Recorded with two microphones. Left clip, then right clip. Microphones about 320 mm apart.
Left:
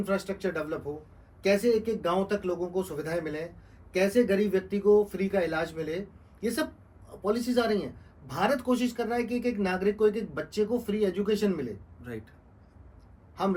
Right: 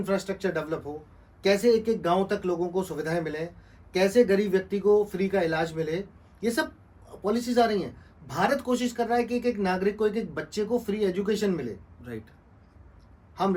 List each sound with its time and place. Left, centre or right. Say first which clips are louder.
0.0 s speech: right 2 dB; right
7.3 s speech: right 3 dB; right
12.0 s speech: right 1 dB; centre